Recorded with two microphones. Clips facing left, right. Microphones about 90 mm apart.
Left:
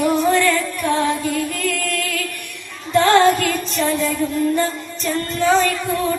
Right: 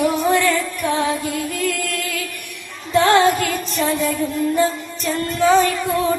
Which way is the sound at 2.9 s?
15° right (ahead or behind).